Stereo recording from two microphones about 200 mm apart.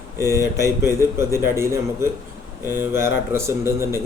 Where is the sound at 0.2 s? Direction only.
15° right (ahead or behind).